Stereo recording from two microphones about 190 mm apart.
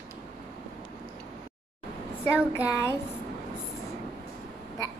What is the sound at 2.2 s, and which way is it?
Speech, 15° left (ahead or behind).